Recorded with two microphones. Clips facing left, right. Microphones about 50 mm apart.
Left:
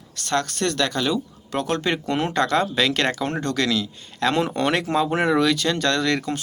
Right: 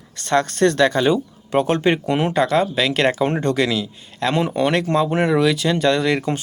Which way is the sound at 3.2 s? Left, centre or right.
Right.